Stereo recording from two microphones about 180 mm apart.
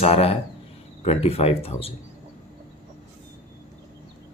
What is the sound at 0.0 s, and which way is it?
Speech, 35° left (ahead or behind).